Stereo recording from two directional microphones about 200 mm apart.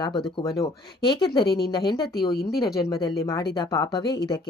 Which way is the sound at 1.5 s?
55° left (ahead or behind).